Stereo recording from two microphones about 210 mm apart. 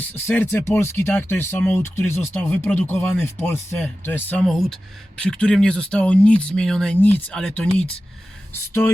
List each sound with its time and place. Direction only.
0.1 s speech: 10° left (ahead or behind)